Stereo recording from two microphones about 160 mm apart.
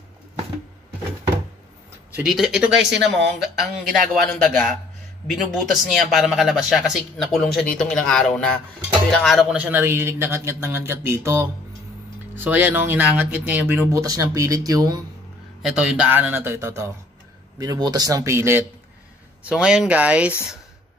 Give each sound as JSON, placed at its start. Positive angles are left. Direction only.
{"t": 2.1, "sound": "speech", "side_deg": 0}
{"t": 5.3, "sound": "speech", "side_deg": 0}
{"t": 15.6, "sound": "speech", "side_deg": -5}
{"t": 19.5, "sound": "speech", "side_deg": -5}